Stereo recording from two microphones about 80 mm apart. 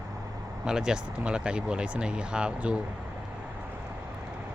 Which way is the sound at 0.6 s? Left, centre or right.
Centre.